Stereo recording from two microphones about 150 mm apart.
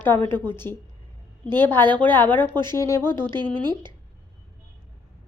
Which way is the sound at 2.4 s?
30° right (ahead or behind).